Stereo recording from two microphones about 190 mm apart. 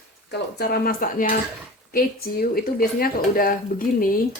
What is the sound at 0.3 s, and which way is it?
Speech, 60° left (ahead or behind).